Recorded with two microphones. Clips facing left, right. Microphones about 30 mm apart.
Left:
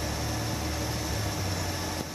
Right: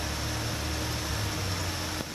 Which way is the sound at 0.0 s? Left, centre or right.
Centre.